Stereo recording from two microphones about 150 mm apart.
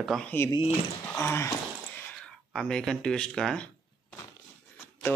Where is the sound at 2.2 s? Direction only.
5° left (ahead or behind).